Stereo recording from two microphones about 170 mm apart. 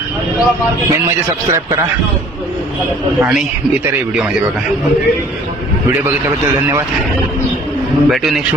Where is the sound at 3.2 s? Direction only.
5° right (ahead or behind).